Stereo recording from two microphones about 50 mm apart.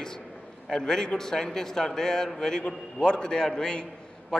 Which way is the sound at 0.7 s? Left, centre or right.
Centre.